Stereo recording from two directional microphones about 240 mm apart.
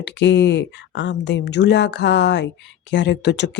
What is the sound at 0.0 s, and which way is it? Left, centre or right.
Speech, left.